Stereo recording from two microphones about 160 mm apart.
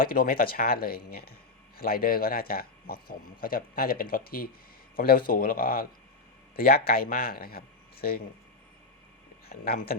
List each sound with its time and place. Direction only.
0.0 s speech: 65° left (ahead or behind)
9.5 s speech: 75° left (ahead or behind)